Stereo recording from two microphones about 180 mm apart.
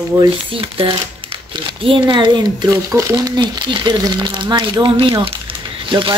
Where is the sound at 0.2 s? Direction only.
30° right (ahead or behind).